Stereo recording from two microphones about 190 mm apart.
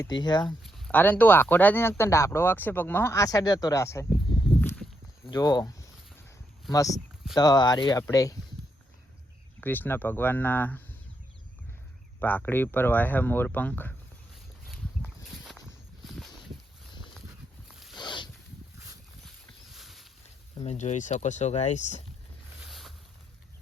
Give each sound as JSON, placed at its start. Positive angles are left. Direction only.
{"t": 0.0, "sound": "speech", "side_deg": 20}
{"t": 0.6, "sound": "speech", "side_deg": 10}
{"t": 4.3, "sound": "walk", "side_deg": 20}
{"t": 4.6, "sound": "walk", "side_deg": 10}
{"t": 5.3, "sound": "speech", "side_deg": 20}
{"t": 9.6, "sound": "speech", "side_deg": 10}
{"t": 12.2, "sound": "speech", "side_deg": 10}
{"t": 14.7, "sound": "a sound", "side_deg": 0}
{"t": 17.7, "sound": "a sound", "side_deg": 0}
{"t": 17.9, "sound": "a sound", "side_deg": 25}
{"t": 19.7, "sound": "a sound", "side_deg": 0}
{"t": 20.6, "sound": "speech", "side_deg": 35}
{"t": 22.6, "sound": "boat", "side_deg": 0}